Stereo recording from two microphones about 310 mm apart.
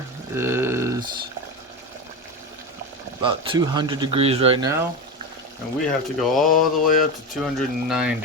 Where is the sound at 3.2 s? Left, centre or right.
Centre.